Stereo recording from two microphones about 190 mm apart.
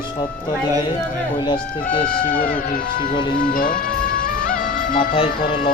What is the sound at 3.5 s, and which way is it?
Music, 45° left (ahead or behind).